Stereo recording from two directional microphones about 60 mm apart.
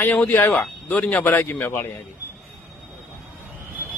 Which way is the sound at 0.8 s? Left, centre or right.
Left.